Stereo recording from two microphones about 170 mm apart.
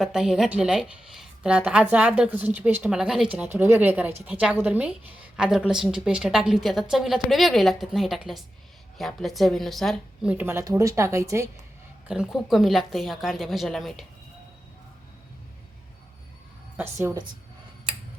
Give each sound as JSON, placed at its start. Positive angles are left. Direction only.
{"t": 0.0, "sound": "a woman's voice", "side_deg": -5}
{"t": 10.3, "sound": "speech", "side_deg": -15}
{"t": 12.0, "sound": "a woman's voice", "side_deg": -5}
{"t": 16.7, "sound": "a woman's voice", "side_deg": -15}